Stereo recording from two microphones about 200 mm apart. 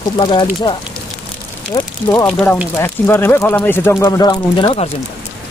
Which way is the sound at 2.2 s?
5° left (ahead or behind).